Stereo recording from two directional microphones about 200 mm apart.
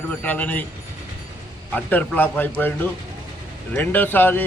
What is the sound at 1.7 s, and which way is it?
A man's voice, 10° left (ahead or behind).